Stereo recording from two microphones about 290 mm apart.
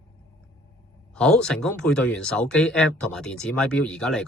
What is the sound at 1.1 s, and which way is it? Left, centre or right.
Speech, centre.